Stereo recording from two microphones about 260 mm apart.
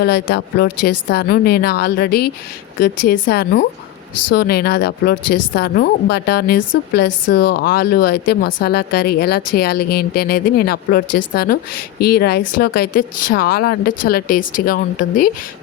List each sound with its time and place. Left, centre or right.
0.0 s speech: left
4.1 s speech: left
4.4 s speech: left